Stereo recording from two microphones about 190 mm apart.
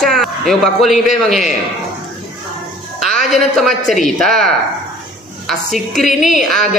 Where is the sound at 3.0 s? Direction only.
Centre (ahead or behind).